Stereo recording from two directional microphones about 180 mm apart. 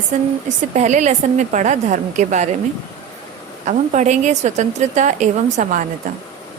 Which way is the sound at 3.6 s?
40° right (ahead or behind).